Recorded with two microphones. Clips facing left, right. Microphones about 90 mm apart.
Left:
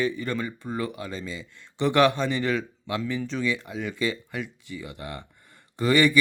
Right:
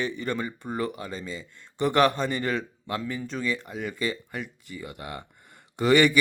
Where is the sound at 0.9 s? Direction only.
40° right (ahead or behind).